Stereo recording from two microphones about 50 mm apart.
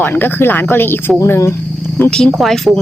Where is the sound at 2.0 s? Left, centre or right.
Left.